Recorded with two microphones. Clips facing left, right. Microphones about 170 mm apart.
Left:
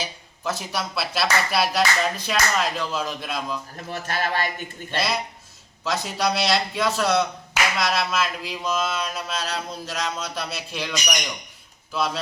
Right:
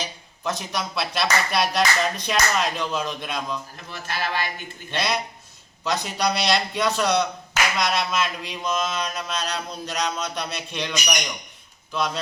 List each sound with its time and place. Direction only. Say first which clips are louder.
0.0 s speech: even; 5° left (ahead or behind)
3.8 s speech: left 3 dB; 45° left (ahead or behind)
4.9 s speech: even; 5° left (ahead or behind)